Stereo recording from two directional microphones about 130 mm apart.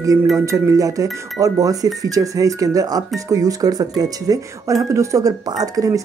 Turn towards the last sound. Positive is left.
turn(degrees=-25)  # may be behind; listen again after turning